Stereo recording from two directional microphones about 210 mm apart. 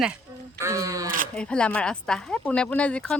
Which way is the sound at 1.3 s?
5° left (ahead or behind).